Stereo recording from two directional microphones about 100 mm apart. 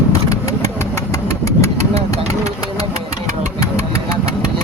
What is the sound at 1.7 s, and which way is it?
Engine, 90° right.